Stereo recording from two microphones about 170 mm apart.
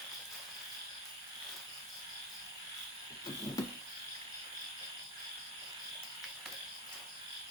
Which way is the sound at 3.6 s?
20° left (ahead or behind).